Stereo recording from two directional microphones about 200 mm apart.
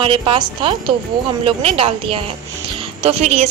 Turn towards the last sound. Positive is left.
turn(degrees=-30)  # may be behind; listen again after turning